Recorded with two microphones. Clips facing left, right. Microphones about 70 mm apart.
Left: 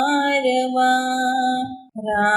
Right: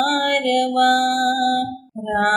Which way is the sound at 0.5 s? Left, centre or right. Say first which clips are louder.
Right 4 dB; right.